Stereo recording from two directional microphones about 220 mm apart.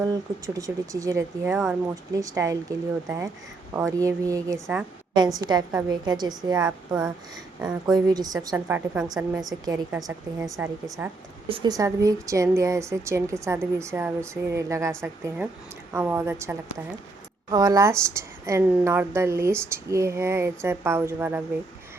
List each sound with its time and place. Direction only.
0.0 s a woman's voice: 15° right (ahead or behind)
5.1 s a woman's voice: 20° right (ahead or behind)
6.6 s a woman's voice: 5° right (ahead or behind)
7.9 s a woman's voice: 15° right (ahead or behind)
9.5 s a woman's voice: 15° right (ahead or behind)
11.4 s a woman's voice: 20° right (ahead or behind)